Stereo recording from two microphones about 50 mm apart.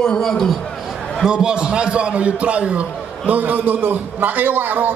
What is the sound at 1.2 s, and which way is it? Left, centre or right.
A man's voice, centre.